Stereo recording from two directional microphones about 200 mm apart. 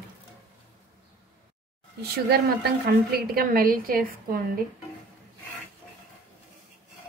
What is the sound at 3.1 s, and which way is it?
A woman's voice, 50° right (ahead or behind).